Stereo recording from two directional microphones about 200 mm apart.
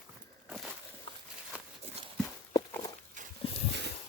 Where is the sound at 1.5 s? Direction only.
5° right (ahead or behind).